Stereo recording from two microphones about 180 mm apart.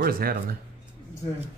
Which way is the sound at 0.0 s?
55° right (ahead or behind).